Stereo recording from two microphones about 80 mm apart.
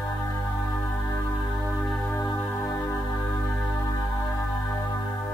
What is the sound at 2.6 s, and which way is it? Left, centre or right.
Music, left.